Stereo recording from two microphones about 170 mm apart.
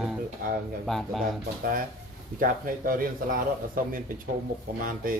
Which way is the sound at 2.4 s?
55° right (ahead or behind).